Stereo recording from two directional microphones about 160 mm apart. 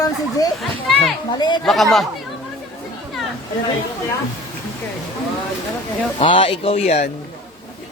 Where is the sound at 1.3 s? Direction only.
25° left (ahead or behind).